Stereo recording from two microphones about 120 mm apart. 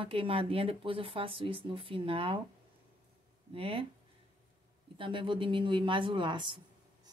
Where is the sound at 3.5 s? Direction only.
50° right (ahead or behind).